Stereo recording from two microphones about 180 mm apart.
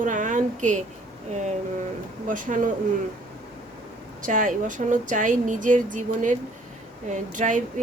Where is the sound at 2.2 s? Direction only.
50° right (ahead or behind).